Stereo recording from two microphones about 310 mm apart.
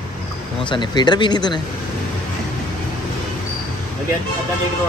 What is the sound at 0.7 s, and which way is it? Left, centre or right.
Speech, centre.